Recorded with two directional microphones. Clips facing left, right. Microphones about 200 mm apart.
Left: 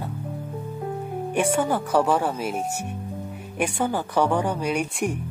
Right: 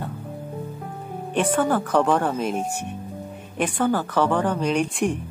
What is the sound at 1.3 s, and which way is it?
Speech, 10° left (ahead or behind).